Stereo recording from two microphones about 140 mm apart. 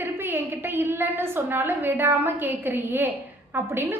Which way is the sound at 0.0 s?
15° right (ahead or behind).